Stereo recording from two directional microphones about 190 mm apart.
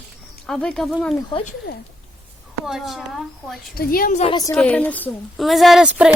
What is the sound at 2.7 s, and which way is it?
Speech, centre (ahead or behind).